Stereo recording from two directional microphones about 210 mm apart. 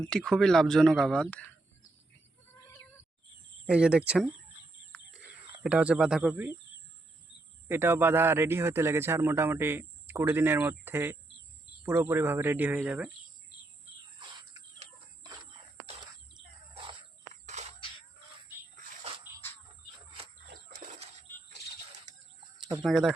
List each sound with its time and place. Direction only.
0.0 s speech: 5° left (ahead or behind)
3.7 s speech: 5° right (ahead or behind)
5.6 s speech: 5° right (ahead or behind)
7.7 s a man's voice: 10° right (ahead or behind)
14.2 s cricket: 20° right (ahead or behind)
17.4 s a sound: 35° right (ahead or behind)
20.5 s a sound: 35° right (ahead or behind)
22.8 s speech: centre (ahead or behind)